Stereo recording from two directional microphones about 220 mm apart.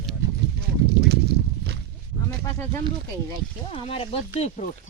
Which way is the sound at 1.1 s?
50° right (ahead or behind).